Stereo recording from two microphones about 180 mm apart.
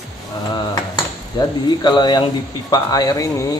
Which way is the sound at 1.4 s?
25° left (ahead or behind).